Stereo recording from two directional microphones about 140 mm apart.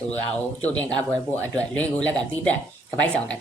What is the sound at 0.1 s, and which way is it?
Speech, 10° left (ahead or behind).